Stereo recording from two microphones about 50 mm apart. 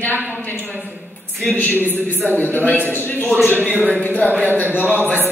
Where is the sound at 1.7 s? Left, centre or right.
Right.